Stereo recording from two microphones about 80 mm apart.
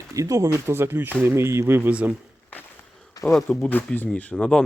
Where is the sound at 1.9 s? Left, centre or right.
Centre.